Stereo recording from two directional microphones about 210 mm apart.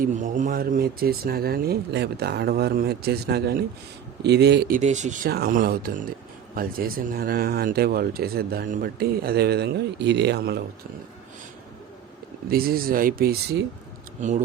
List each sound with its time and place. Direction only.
0.0 s speech: 35° right (ahead or behind)
4.8 s speech: 35° right (ahead or behind); by 10.6 s 50° right (ahead or behind)
12.5 s speech: 45° right (ahead or behind)
14.2 s speech: 35° right (ahead or behind)